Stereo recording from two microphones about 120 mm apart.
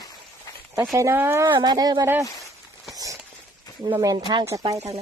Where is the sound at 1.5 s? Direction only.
35° right (ahead or behind).